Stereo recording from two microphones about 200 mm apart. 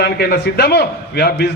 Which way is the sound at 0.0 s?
55° left (ahead or behind).